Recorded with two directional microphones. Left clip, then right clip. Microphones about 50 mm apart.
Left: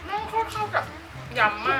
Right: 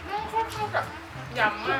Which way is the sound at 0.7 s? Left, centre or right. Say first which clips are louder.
Left 2 dB; centre.